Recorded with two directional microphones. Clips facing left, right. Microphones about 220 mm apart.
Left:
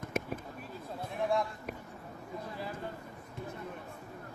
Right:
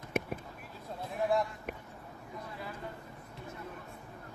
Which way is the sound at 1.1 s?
Centre (ahead or behind).